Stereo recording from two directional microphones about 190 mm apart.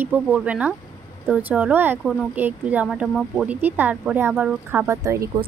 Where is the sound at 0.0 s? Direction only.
5° right (ahead or behind).